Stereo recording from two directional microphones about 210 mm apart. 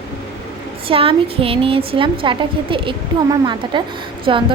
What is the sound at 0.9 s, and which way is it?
A woman's voice, 25° right (ahead or behind).